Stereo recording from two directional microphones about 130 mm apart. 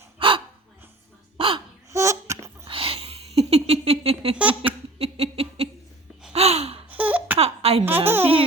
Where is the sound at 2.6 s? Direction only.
45° right (ahead or behind).